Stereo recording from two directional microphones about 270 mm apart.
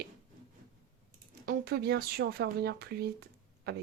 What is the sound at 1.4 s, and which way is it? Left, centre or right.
Speech, right.